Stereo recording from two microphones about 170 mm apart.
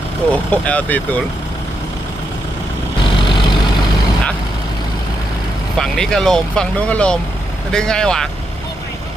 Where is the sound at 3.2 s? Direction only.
30° left (ahead or behind).